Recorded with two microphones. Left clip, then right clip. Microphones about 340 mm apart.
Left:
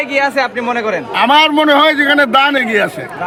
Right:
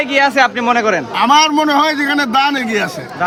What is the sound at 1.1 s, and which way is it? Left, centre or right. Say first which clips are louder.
A man's voice: left 2 dB; left.